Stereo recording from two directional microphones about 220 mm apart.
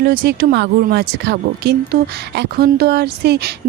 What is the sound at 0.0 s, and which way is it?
Speech, 45° right (ahead or behind).